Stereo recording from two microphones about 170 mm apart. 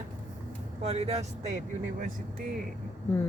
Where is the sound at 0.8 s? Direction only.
35° right (ahead or behind).